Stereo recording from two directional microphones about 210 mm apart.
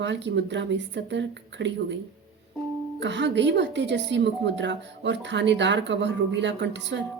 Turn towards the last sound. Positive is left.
turn(degrees=-55)  # may be behind; listen again after turning